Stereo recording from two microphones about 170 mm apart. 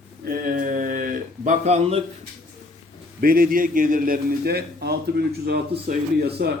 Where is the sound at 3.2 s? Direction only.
60° right (ahead or behind).